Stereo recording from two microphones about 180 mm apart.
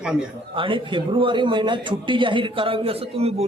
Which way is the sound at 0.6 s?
25° right (ahead or behind).